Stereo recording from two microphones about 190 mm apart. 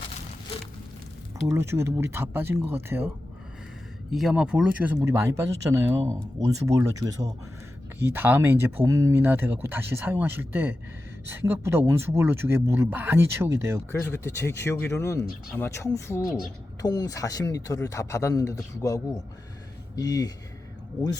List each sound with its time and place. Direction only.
1.5 s speech: 15° right (ahead or behind)
4.1 s speech: centre (ahead or behind)
13.9 s speech: 10° left (ahead or behind)